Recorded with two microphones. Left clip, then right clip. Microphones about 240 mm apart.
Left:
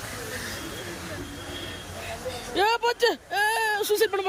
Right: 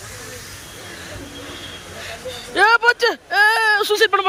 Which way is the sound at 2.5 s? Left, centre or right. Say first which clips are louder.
Right 10 dB; centre.